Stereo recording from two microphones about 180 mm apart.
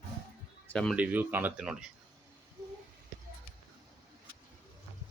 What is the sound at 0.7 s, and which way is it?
Speech, 5° left (ahead or behind).